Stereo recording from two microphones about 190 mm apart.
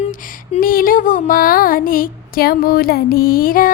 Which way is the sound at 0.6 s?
50° left (ahead or behind).